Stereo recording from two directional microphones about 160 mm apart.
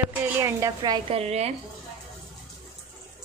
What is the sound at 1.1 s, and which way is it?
Speech, 40° right (ahead or behind).